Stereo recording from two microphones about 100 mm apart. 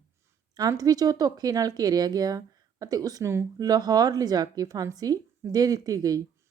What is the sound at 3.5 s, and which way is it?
Speech, 40° right (ahead or behind).